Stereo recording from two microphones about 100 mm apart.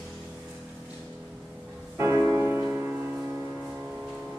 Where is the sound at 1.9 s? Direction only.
30° right (ahead or behind).